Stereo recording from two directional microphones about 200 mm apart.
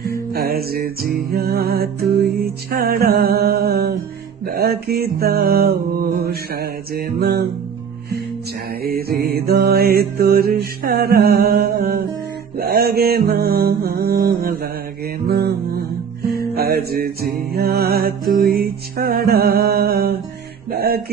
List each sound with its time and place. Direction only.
0.0 s music: 50° right (ahead or behind)
8.8 s music: 50° right (ahead or behind)
12.5 s mantra: 50° right (ahead or behind)
16.3 s music: 50° right (ahead or behind)